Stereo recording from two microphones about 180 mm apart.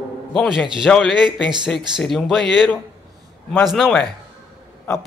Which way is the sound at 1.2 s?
25° right (ahead or behind).